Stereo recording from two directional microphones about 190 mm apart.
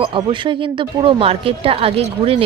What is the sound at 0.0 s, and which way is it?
A woman's voice, 25° right (ahead or behind).